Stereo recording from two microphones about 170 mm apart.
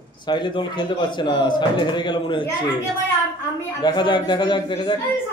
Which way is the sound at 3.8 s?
25° left (ahead or behind).